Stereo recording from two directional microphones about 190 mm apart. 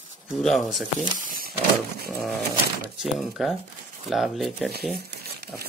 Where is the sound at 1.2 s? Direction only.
50° right (ahead or behind).